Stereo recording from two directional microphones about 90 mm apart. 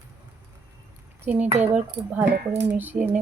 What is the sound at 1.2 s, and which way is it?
Speech, 20° right (ahead or behind).